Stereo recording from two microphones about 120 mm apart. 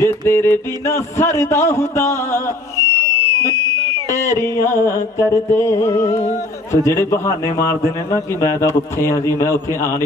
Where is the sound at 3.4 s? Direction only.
25° left (ahead or behind).